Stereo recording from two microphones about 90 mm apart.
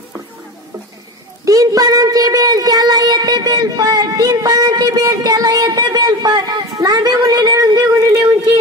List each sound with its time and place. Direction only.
1.4 s a woman's voice: 40° right (ahead or behind)